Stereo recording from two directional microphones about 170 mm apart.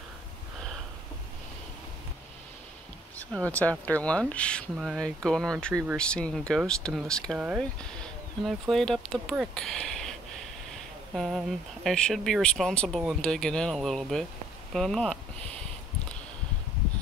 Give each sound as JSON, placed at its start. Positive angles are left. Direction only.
{"t": 3.3, "sound": "speech", "side_deg": 10}
{"t": 7.3, "sound": "speech", "side_deg": -10}
{"t": 8.0, "sound": "speech", "side_deg": 0}
{"t": 11.1, "sound": "speech", "side_deg": 0}